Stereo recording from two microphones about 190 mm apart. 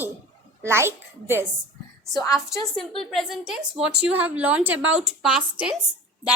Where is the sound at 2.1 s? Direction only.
15° left (ahead or behind).